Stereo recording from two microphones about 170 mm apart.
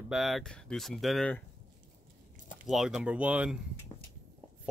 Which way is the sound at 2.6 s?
Centre (ahead or behind).